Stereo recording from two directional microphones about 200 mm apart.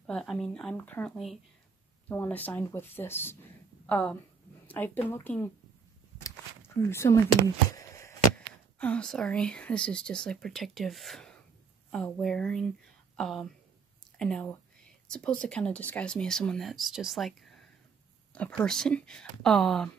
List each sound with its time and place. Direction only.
0.0 s a woman's voice: 5° left (ahead or behind)
6.9 s speech: 15° left (ahead or behind)